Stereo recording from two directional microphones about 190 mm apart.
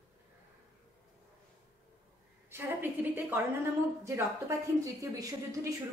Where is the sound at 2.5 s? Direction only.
10° right (ahead or behind).